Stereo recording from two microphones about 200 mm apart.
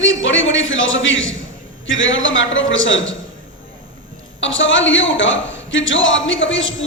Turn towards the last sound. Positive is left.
turn(degrees=70)  # may be behind; listen again after turning